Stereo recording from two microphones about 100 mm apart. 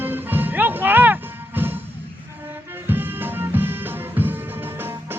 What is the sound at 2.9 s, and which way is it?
Music, 20° right (ahead or behind).